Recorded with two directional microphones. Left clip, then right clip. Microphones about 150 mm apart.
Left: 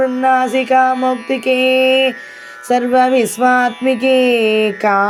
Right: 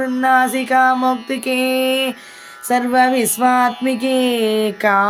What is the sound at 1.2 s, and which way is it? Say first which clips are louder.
Mantra: left 5 dB; 5° left (ahead or behind).